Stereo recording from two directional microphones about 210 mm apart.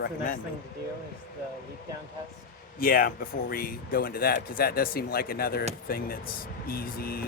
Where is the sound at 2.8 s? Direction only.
45° left (ahead or behind).